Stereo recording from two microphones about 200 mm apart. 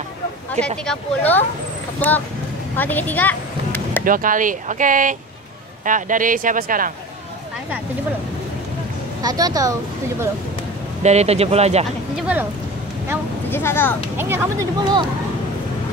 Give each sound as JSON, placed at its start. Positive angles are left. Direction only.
{"t": 0.8, "sound": "speech", "side_deg": 10}
{"t": 2.7, "sound": "vehicle", "side_deg": 10}
{"t": 4.0, "sound": "speech", "side_deg": -45}
{"t": 9.2, "sound": "a woman's voice", "side_deg": -20}
{"t": 11.0, "sound": "speech", "side_deg": -35}
{"t": 12.2, "sound": "a woman's voice", "side_deg": -5}
{"t": 13.5, "sound": "speech", "side_deg": 10}
{"t": 14.1, "sound": "a woman's voice", "side_deg": -10}